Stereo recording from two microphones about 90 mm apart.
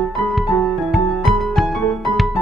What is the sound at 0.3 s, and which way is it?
Music, centre (ahead or behind).